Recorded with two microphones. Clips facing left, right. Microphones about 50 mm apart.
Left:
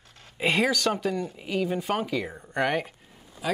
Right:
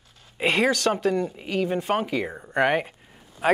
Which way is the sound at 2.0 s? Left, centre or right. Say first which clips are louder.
Right 2 dB; centre.